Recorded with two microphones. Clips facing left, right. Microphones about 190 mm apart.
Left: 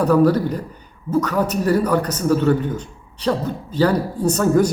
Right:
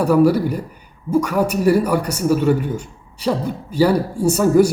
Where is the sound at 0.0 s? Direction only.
10° right (ahead or behind).